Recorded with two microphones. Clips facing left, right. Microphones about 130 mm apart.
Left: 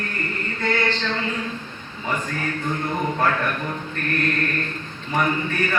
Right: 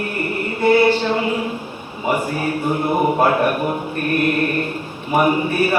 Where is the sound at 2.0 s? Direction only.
10° right (ahead or behind).